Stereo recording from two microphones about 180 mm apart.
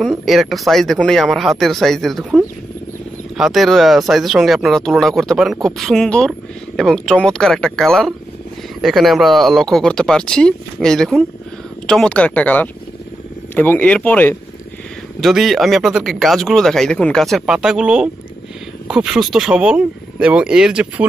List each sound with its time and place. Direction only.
0.0 s speech: centre (ahead or behind)
15.1 s speech: centre (ahead or behind)